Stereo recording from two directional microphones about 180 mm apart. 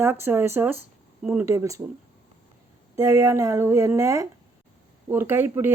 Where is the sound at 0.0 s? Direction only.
10° right (ahead or behind).